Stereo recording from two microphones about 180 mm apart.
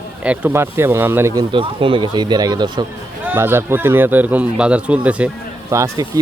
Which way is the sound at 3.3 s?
10° right (ahead or behind).